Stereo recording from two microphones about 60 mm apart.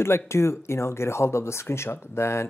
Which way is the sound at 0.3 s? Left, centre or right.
Left.